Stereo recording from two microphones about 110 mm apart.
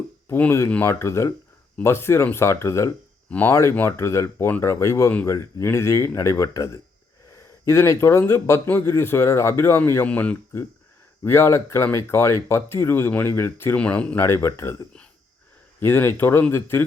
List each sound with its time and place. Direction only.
0.3 s speech: 15° left (ahead or behind)
3.2 s speech: 15° left (ahead or behind)
3.5 s speech: 30° left (ahead or behind); by 10.3 s 10° left (ahead or behind)
11.2 s speech: 25° left (ahead or behind)
13.7 s speech: 10° left (ahead or behind)
14.3 s speech: 25° left (ahead or behind)